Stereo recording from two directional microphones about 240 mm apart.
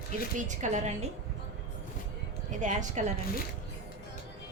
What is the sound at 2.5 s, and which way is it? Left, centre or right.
Speech, right.